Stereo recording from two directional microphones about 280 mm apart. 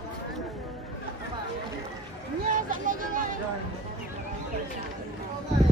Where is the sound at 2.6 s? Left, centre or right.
Right.